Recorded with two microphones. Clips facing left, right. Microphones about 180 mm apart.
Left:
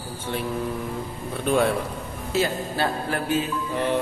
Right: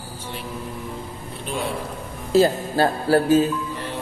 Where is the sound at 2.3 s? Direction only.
35° right (ahead or behind).